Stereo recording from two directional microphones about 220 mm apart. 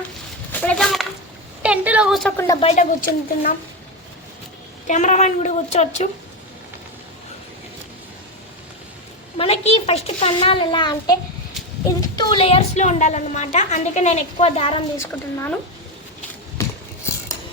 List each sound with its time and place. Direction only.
0.6 s a sound: 5° left (ahead or behind)
2.6 s a woman's voice: 30° left (ahead or behind)
4.9 s a woman's voice: 35° left (ahead or behind)
9.4 s a child's voice: 30° left (ahead or behind)
14.9 s a woman's voice: 15° left (ahead or behind)